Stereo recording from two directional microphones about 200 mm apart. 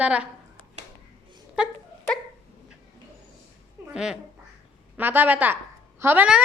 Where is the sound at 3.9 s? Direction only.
5° right (ahead or behind).